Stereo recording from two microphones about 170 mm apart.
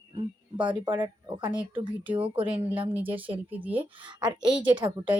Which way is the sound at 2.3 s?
30° right (ahead or behind).